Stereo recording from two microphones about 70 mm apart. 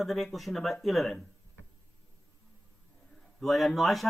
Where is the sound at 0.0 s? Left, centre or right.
Centre.